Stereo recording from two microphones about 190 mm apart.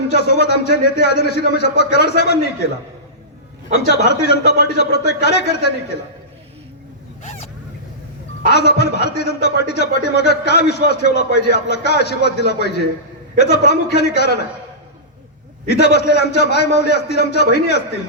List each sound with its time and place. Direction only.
0.1 s a man's voice: 60° left (ahead or behind)
3.8 s a man's voice: 60° left (ahead or behind)
7.2 s a sound: 40° left (ahead or behind)
8.4 s a man's voice: 60° left (ahead or behind)
15.7 s a man's voice: 60° left (ahead or behind)